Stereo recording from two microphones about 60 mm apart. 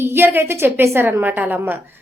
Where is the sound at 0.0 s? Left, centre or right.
Right.